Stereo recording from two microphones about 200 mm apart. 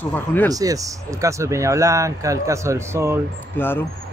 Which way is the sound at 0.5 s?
15° right (ahead or behind).